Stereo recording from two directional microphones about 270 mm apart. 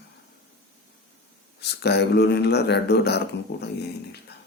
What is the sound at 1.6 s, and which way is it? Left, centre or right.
Speech, left.